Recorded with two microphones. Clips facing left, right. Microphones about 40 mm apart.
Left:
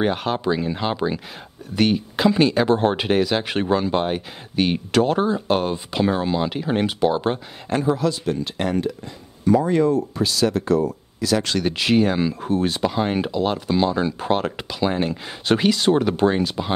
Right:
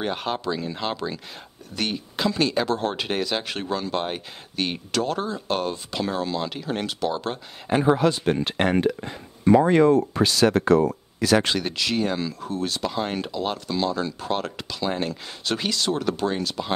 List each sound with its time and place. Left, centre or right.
0.1 s speech: centre
0.4 s speech: centre
3.1 s speech: centre
3.4 s speech: left
7.8 s speech: right
11.7 s speech: left